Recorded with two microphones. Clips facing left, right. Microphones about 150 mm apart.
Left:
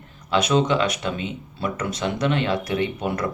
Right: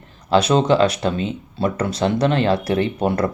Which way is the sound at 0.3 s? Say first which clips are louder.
Right 4 dB; 35° right (ahead or behind).